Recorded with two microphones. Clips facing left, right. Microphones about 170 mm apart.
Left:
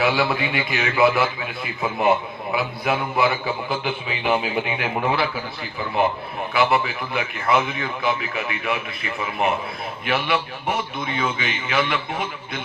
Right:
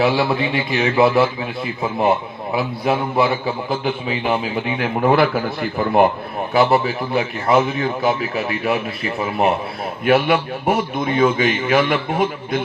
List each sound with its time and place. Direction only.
0.0 s a man's voice: 30° right (ahead or behind); by 6.1 s 55° right (ahead or behind)
6.5 s a man's voice: 40° right (ahead or behind)